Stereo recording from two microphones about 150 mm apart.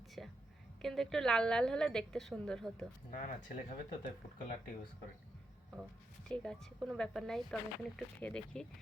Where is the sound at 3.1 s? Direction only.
55° left (ahead or behind).